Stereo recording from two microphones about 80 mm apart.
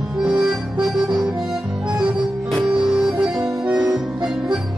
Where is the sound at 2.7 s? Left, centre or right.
Centre.